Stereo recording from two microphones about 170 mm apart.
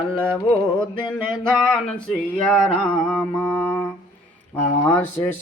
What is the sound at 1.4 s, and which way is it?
Mantra, 5° left (ahead or behind).